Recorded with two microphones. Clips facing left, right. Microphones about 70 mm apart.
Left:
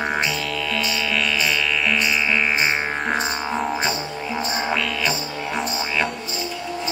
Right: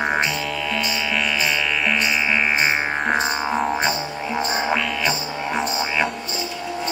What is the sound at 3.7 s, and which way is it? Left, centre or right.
Music, centre.